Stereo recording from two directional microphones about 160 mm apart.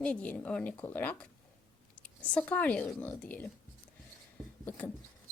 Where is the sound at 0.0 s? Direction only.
5° left (ahead or behind).